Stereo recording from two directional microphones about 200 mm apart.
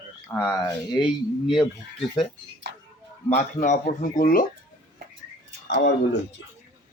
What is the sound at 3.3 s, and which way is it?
Speech, 35° left (ahead or behind).